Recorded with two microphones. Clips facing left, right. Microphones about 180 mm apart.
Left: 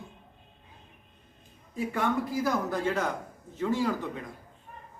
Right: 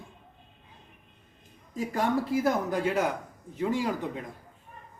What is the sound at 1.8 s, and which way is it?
Speech, 35° right (ahead or behind).